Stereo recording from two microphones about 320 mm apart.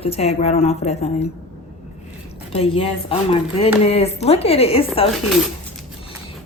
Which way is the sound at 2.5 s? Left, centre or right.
Centre.